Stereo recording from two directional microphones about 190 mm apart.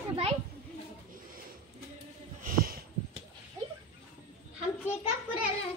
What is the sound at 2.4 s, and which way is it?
Snort, 50° right (ahead or behind).